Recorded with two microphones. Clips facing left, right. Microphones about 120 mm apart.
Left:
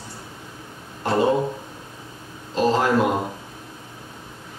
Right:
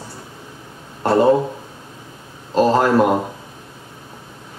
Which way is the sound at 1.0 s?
45° right (ahead or behind).